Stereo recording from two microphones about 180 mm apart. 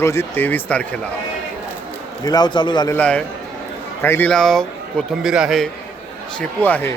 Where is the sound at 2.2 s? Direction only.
20° left (ahead or behind).